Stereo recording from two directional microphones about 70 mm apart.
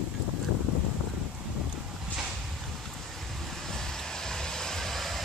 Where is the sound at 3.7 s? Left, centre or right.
Centre.